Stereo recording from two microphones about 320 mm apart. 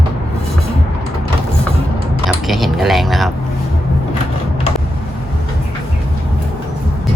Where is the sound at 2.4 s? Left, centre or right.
Centre.